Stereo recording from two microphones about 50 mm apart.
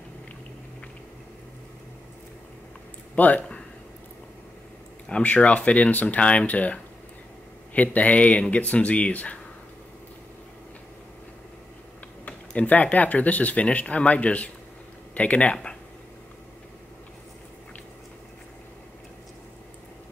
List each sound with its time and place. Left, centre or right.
3.2 s speech: left
5.2 s speech: left
12.3 s speech: left
15.5 s speech: centre